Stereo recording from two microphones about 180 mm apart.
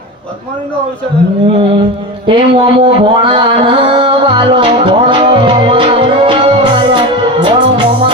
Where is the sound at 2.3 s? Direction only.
25° right (ahead or behind).